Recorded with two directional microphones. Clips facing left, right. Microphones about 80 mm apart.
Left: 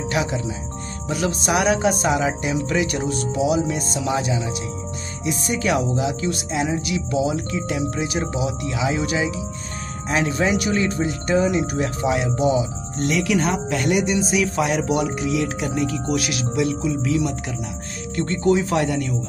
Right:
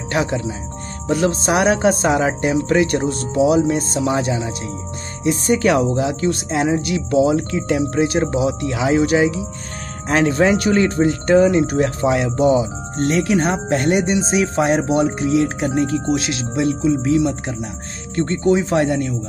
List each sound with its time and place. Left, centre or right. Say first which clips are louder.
0.1 s speech: right 5 dB; right